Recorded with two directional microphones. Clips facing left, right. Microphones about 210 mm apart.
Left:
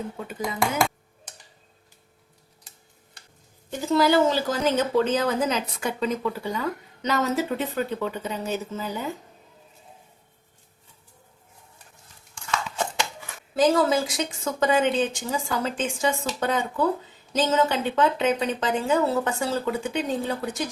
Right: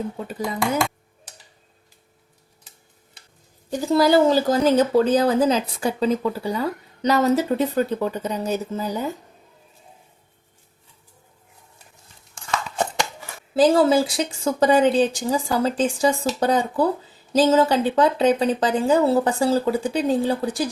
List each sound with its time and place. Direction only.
3.7 s speech: 35° right (ahead or behind)
13.6 s speech: 30° right (ahead or behind)